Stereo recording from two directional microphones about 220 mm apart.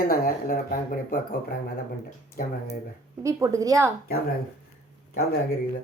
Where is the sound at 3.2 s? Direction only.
15° right (ahead or behind).